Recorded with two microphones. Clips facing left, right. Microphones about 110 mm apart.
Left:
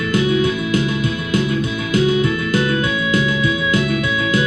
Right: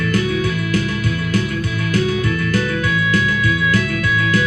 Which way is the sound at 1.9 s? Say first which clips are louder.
Left 3 dB; 20° left (ahead or behind).